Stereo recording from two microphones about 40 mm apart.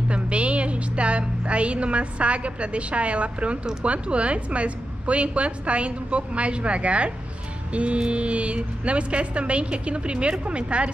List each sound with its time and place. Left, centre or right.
0.1 s music: right
3.8 s a woman's voice: right